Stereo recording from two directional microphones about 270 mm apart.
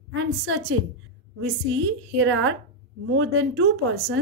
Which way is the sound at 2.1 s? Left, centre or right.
Right.